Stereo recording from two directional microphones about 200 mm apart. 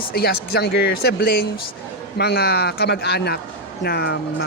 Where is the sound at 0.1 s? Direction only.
50° left (ahead or behind).